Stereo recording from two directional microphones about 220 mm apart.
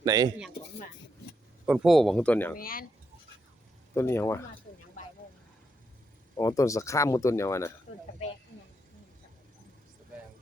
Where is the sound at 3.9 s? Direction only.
10° left (ahead or behind).